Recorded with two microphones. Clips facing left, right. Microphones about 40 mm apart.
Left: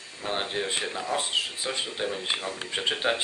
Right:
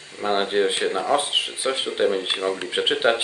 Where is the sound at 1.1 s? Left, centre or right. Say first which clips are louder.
Right 6 dB; right.